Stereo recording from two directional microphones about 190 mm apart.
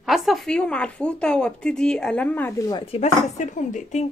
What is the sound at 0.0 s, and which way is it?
Speech, centre (ahead or behind).